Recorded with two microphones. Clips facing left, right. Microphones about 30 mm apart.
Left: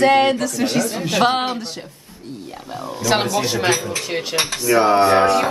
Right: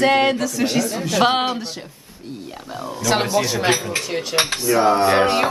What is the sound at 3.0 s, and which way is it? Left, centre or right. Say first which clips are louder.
Speech: even; centre.